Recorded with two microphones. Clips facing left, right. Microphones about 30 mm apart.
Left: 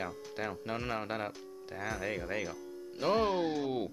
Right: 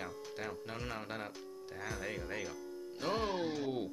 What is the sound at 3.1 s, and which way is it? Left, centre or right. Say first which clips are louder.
Speech: left 6 dB; centre.